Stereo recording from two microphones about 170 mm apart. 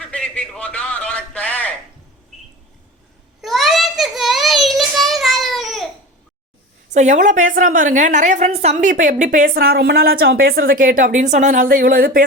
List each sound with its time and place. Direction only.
0.0 s a sound: 5° left (ahead or behind)
3.4 s child singing: centre (ahead or behind)
6.9 s a woman's voice: 45° right (ahead or behind)